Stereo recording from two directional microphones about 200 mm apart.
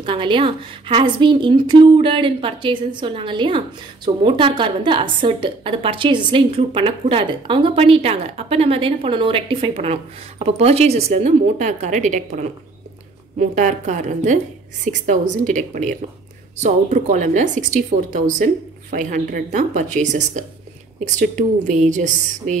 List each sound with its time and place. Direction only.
0.0 s a woman's voice: 25° right (ahead or behind)
13.4 s a woman's voice: 40° right (ahead or behind)